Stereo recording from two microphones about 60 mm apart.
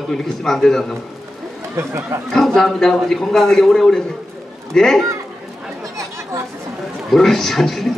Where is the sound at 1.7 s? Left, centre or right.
Right.